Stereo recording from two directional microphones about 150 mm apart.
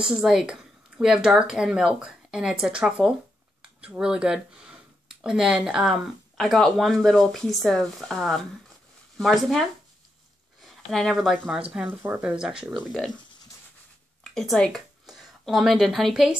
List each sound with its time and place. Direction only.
0.0 s speech: 5° right (ahead or behind)
10.9 s speech: centre (ahead or behind)
14.2 s a woman's voice: 5° left (ahead or behind)